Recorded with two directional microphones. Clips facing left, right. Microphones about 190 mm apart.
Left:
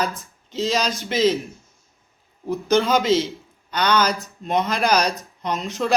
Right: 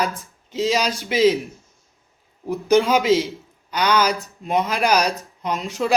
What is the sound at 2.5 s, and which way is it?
A man's voice, 10° right (ahead or behind).